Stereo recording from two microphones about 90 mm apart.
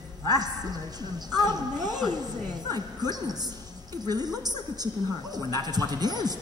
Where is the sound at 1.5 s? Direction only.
50° right (ahead or behind).